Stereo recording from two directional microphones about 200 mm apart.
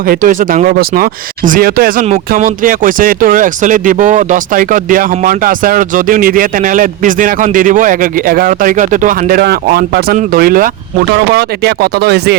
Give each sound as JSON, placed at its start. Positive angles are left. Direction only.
{"t": 0.1, "sound": "speech", "side_deg": -40}